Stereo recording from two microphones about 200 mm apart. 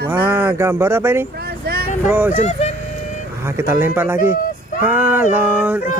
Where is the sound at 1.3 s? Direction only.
50° right (ahead or behind).